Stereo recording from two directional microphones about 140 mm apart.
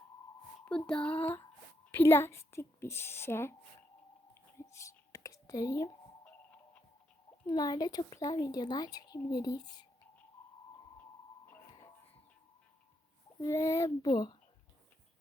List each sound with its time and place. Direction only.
0.9 s a sound: 10° left (ahead or behind)
1.9 s a woman's voice: 15° left (ahead or behind)
4.5 s whispering: 20° left (ahead or behind)
7.4 s a woman's voice: 30° left (ahead or behind)
13.4 s a woman's voice: 20° left (ahead or behind)